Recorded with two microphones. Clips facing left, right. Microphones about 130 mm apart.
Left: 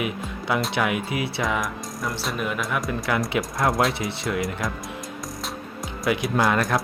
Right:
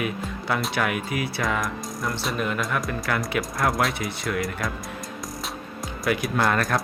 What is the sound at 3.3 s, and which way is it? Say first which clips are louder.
Speech: left 1 dB; 25° left (ahead or behind).